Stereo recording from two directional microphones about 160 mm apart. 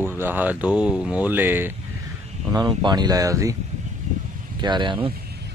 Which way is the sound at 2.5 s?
25° right (ahead or behind).